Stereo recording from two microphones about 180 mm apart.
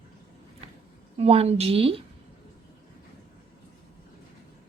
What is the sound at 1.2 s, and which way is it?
Speech, 35° right (ahead or behind).